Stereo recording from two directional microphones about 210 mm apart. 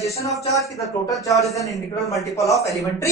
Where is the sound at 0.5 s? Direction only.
15° left (ahead or behind).